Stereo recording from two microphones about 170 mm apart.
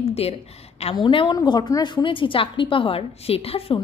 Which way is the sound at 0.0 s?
35° left (ahead or behind).